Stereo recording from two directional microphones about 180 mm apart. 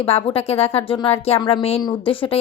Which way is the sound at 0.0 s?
35° left (ahead or behind).